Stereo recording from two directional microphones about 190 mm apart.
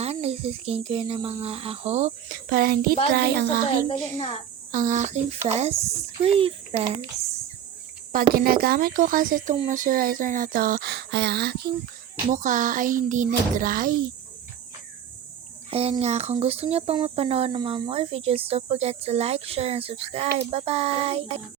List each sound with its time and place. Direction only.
0.0 s speech: 35° right (ahead or behind)
2.5 s speech: 50° right (ahead or behind)
4.7 s speech: 40° right (ahead or behind)
8.1 s speech: 50° right (ahead or behind)
12.3 s speech: 40° right (ahead or behind)
15.7 s speech: 30° right (ahead or behind)